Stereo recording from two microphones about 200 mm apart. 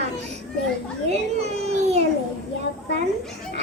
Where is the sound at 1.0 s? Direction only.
35° right (ahead or behind).